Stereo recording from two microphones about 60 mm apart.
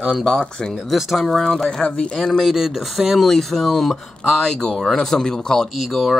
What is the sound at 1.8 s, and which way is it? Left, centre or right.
Speech, centre.